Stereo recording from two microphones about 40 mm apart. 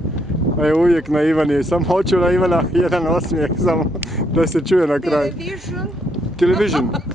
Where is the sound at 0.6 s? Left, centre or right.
Centre.